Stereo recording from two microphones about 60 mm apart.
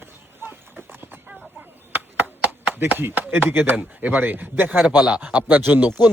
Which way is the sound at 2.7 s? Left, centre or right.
Right.